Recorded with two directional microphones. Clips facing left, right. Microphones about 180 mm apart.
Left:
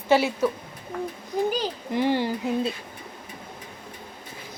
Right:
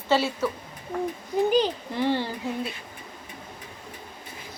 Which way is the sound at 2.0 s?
15° left (ahead or behind).